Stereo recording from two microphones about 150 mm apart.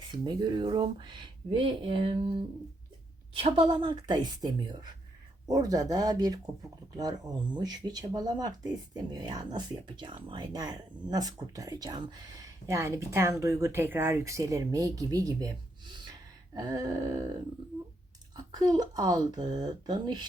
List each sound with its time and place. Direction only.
0.1 s speech: 30° right (ahead or behind)
18.5 s speech: 25° right (ahead or behind)